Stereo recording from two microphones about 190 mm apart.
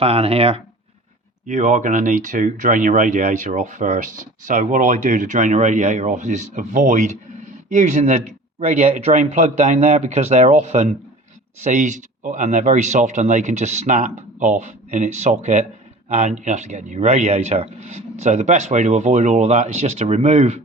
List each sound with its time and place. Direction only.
0.0 s speech: 30° right (ahead or behind)